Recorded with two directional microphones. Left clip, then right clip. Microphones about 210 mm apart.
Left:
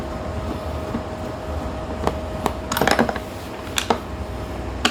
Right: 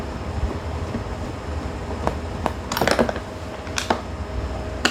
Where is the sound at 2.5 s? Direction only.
20° left (ahead or behind).